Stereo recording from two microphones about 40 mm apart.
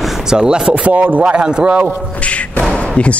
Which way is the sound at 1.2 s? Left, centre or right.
Right.